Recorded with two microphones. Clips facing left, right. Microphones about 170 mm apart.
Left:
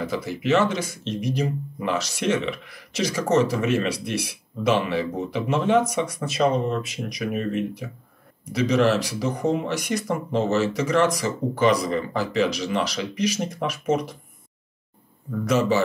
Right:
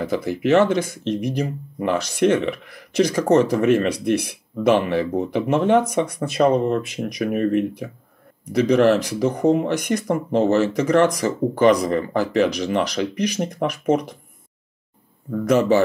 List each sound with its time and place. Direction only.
0.0 s speech: 50° right (ahead or behind)
15.4 s speech: 55° right (ahead or behind)